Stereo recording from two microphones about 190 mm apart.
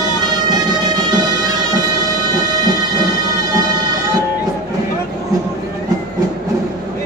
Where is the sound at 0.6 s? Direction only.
20° right (ahead or behind).